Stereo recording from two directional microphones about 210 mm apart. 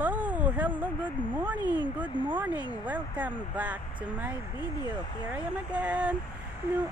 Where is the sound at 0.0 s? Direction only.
10° right (ahead or behind).